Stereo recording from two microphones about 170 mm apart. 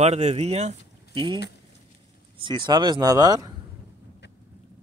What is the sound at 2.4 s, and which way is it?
Speech, 30° right (ahead or behind).